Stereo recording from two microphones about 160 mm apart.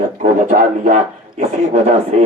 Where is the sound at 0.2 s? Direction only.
55° right (ahead or behind).